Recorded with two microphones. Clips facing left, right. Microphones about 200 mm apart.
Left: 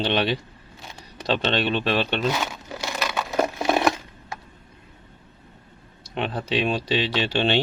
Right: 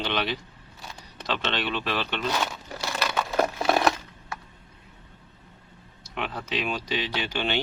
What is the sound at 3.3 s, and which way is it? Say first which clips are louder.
Wood: left 2 dB; 15° left (ahead or behind).